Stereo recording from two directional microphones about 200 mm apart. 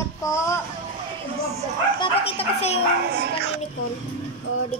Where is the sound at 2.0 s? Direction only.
30° left (ahead or behind).